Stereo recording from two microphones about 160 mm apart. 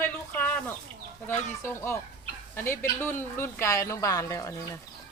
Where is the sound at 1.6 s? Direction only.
15° left (ahead or behind).